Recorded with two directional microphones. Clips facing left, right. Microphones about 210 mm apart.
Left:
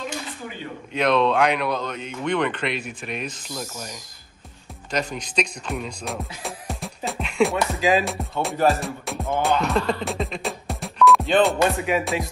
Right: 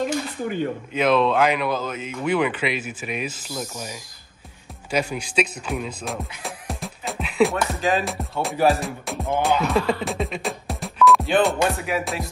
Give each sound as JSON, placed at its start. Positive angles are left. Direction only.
{"t": 0.0, "sound": "dishes", "side_deg": -50}
{"t": 0.9, "sound": "speech", "side_deg": 0}
{"t": 7.1, "sound": "music", "side_deg": 0}